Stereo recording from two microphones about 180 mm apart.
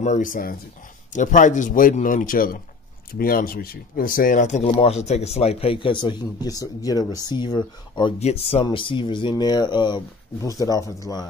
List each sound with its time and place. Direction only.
0.0 s a man's voice: 45° left (ahead or behind); by 8.1 s 25° left (ahead or behind)
8.2 s speech: 35° left (ahead or behind); by 11.2 s 20° left (ahead or behind)